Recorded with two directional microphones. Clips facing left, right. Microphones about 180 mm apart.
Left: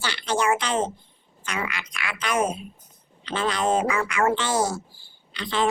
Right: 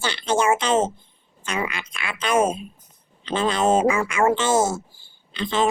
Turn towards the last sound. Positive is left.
turn(degrees=-20)  # may be behind; listen again after turning